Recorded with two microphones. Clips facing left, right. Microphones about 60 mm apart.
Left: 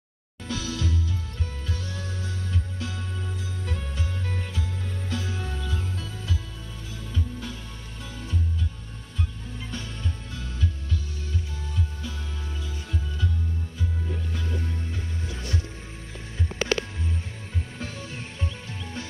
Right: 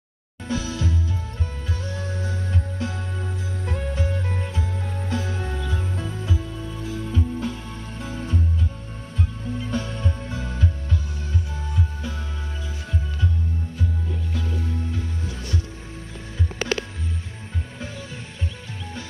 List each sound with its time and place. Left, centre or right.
0.5 s music: right
9.7 s music: right